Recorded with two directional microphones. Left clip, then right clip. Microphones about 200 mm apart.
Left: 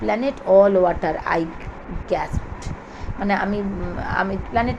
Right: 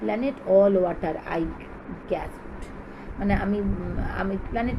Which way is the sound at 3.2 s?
5° left (ahead or behind).